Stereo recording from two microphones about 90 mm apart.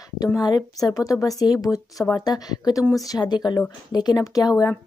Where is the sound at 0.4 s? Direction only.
45° left (ahead or behind).